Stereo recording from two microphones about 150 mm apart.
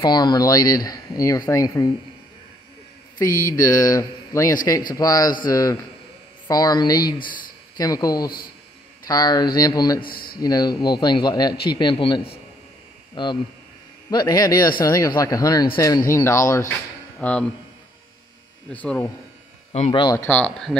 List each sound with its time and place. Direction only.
0.0 s speech: 30° left (ahead or behind)
3.2 s speech: 20° left (ahead or behind)
10.0 s speech: 80° left
10.4 s speech: 25° left (ahead or behind)
17.2 s speech: 10° left (ahead or behind)
18.7 s speech: 10° left (ahead or behind)
19.9 s speech: 35° left (ahead or behind)
20.2 s speech: 10° left (ahead or behind)